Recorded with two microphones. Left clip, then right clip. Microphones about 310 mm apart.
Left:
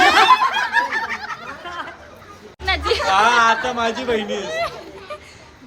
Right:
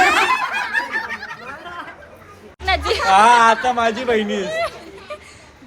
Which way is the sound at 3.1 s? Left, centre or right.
Centre.